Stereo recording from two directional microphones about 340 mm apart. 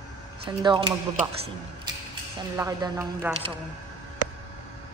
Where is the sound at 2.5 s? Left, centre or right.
Centre.